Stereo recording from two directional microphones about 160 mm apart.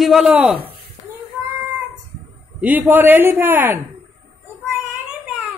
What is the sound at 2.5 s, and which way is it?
A man's voice, 10° right (ahead or behind).